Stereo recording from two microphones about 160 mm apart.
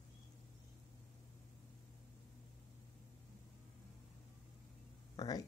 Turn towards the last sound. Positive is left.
turn(degrees=25)  # may be behind; listen again after turning